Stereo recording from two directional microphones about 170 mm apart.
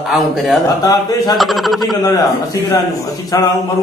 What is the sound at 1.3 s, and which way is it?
Speech, centre (ahead or behind).